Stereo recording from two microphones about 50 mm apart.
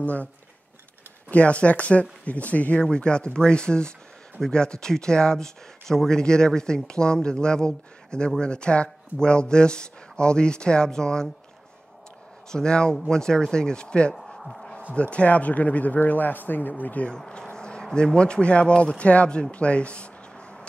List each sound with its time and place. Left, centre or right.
0.0 s speech: left
1.3 s speech: left
2.8 s speech: centre
12.4 s speech: centre
14.1 s a sound: centre
15.0 s a man's voice: left
17.1 s speech: centre